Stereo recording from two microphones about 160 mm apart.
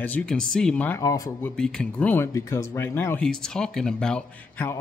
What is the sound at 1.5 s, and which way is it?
Speech, 5° left (ahead or behind).